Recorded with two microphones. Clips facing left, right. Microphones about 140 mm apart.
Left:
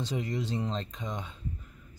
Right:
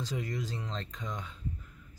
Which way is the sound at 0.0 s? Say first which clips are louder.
Left 3 dB; 25° left (ahead or behind).